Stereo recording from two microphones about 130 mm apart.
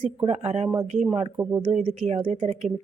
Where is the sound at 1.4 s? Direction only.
20° right (ahead or behind).